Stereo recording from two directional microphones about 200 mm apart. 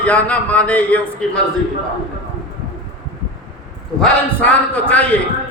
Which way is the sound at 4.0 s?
5° left (ahead or behind).